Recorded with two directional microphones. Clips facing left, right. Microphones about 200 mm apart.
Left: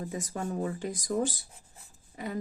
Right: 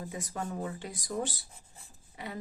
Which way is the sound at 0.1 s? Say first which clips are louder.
Left 3 dB; 45° left (ahead or behind).